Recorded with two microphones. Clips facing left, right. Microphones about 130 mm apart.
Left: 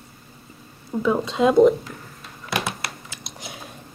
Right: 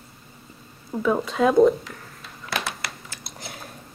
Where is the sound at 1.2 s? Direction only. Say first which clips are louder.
Left 1 dB; 25° left (ahead or behind).